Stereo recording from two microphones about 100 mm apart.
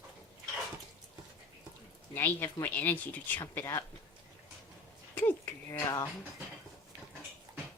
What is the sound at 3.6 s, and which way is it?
Speech, 30° left (ahead or behind).